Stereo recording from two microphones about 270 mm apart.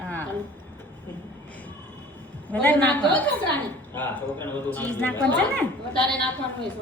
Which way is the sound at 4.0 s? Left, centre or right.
Centre.